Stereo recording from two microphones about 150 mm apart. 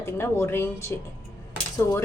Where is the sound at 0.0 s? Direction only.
15° left (ahead or behind).